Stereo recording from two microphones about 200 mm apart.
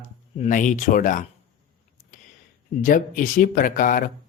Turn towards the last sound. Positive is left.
turn(degrees=45)  # may be behind; listen again after turning